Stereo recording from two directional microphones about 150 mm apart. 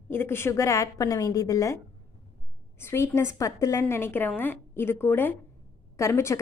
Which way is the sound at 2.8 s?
15° left (ahead or behind).